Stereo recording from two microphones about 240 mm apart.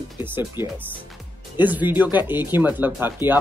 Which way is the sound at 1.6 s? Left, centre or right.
Centre.